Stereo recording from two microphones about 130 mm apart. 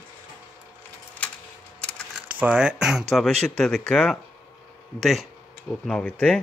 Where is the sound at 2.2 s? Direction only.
10° right (ahead or behind); by 6.4 s 10° left (ahead or behind).